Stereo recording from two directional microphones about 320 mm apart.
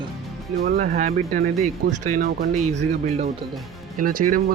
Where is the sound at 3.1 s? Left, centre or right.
Centre.